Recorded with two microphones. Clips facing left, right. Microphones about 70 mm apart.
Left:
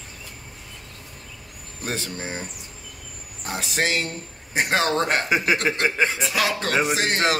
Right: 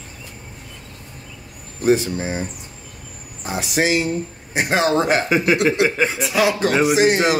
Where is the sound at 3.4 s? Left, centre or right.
Centre.